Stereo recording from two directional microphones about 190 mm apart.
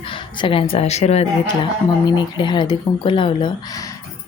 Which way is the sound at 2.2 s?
25° left (ahead or behind).